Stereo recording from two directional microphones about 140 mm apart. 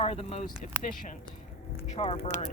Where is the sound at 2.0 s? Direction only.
40° left (ahead or behind).